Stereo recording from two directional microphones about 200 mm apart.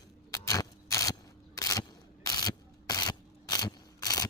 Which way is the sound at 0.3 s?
15° left (ahead or behind).